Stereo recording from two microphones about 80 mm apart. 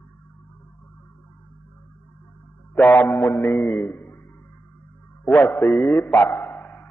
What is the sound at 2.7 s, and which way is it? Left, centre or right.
Speech, left.